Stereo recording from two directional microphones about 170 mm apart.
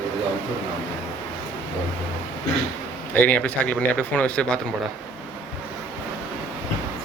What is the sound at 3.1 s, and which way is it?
Speech, 10° left (ahead or behind).